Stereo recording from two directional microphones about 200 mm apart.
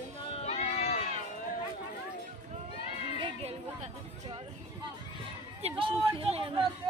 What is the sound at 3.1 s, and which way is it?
Children playing, 25° right (ahead or behind).